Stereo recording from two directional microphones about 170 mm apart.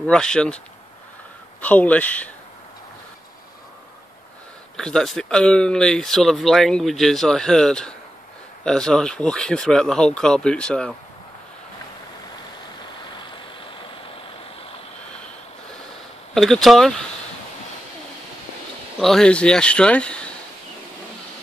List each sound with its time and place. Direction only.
0.0 s speech: 5° left (ahead or behind)
1.6 s speech: 10° left (ahead or behind)
4.7 s speech: centre (ahead or behind)
16.3 s speech: centre (ahead or behind)
18.9 s speech: centre (ahead or behind)